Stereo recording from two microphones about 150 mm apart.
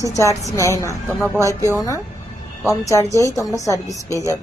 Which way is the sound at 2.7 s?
20° left (ahead or behind).